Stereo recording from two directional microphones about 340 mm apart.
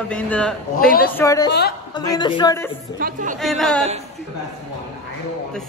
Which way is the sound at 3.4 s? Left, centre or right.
Centre.